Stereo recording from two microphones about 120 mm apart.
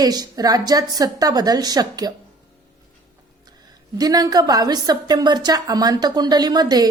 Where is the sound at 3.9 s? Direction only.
30° right (ahead or behind).